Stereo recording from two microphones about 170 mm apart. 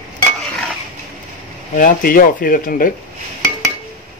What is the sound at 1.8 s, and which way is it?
Speech, 55° left (ahead or behind).